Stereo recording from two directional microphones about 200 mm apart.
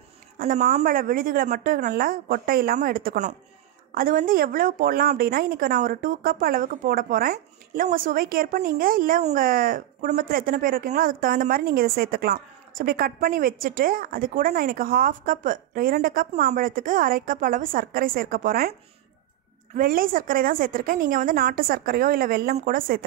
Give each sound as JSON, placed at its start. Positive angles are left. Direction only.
{"t": 0.4, "sound": "a woman's voice", "side_deg": -40}